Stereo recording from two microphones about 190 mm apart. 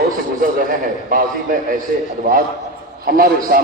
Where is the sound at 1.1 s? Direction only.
45° right (ahead or behind).